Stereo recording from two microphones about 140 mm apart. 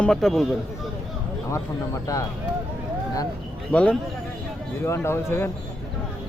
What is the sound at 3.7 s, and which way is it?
Speech, 10° left (ahead or behind).